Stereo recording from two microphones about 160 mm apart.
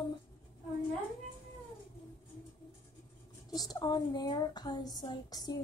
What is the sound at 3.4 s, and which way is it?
Speech, 25° left (ahead or behind).